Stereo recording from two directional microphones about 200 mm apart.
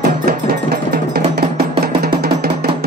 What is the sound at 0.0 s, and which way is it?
Music, 50° right (ahead or behind).